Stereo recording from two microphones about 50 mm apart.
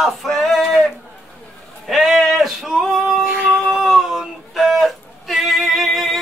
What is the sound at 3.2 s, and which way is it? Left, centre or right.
Music, right.